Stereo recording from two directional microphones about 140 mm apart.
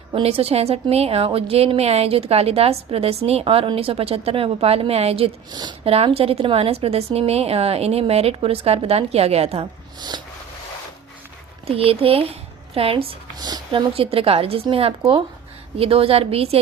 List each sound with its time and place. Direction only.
0.1 s a woman's voice: 45° right (ahead or behind)
5.5 s speech: 30° right (ahead or behind)
5.8 s a woman's voice: 45° right (ahead or behind)
11.6 s speech: 40° right (ahead or behind)
13.4 s speech: 30° right (ahead or behind)
13.9 s a woman's voice: 40° right (ahead or behind)